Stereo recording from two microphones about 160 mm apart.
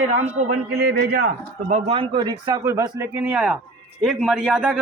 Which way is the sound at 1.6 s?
40° right (ahead or behind).